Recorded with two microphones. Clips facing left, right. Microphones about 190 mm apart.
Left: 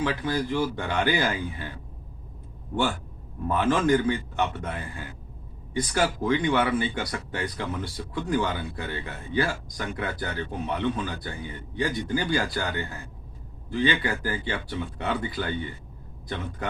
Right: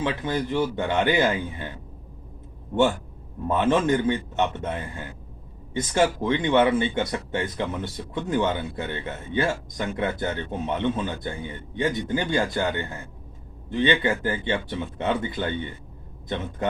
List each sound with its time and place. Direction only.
0.0 s speech: 20° right (ahead or behind)
3.5 s speech: 20° right (ahead or behind)